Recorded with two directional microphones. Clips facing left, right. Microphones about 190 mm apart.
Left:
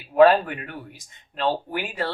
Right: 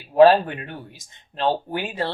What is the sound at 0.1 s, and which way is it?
Speech, 30° right (ahead or behind).